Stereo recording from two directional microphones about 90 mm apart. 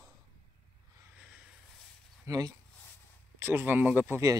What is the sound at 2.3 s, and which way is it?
Speech, 40° right (ahead or behind).